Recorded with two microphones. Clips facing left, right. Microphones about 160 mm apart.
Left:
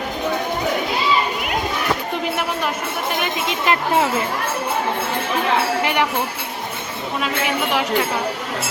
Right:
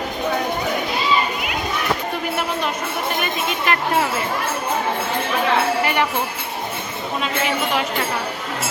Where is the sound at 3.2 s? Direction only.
25° left (ahead or behind).